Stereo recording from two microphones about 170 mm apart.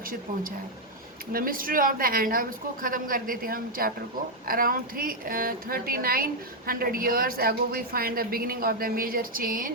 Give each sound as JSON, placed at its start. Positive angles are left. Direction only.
{"t": 1.3, "sound": "a woman's voice", "side_deg": -55}